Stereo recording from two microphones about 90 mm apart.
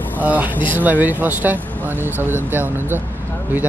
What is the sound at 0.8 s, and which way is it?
Speech, 20° right (ahead or behind).